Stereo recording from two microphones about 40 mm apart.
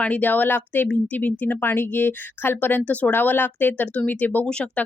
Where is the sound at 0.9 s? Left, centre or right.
Left.